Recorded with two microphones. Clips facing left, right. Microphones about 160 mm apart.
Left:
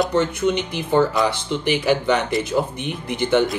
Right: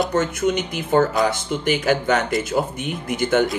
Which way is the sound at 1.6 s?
50° right (ahead or behind).